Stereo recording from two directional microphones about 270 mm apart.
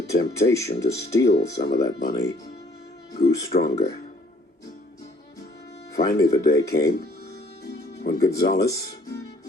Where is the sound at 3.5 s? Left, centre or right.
Left.